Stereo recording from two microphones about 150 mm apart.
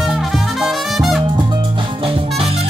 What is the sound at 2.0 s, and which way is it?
Music, 40° right (ahead or behind).